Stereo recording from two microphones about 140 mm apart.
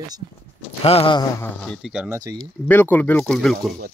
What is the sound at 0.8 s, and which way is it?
Speech, 45° left (ahead or behind).